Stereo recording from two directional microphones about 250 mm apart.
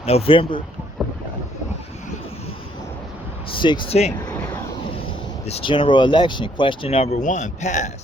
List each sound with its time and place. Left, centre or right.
0.0 s speech: left
3.5 s speech: centre
5.5 s speech: left